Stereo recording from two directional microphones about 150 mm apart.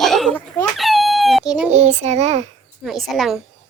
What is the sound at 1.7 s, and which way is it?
Speech, 50° right (ahead or behind).